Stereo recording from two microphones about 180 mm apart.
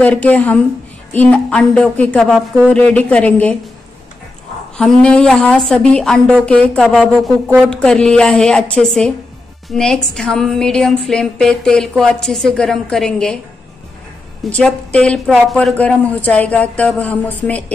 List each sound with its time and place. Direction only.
0.0 s a woman's voice: 10° left (ahead or behind)
4.7 s a woman's voice: 5° left (ahead or behind)
14.5 s speech: 5° left (ahead or behind)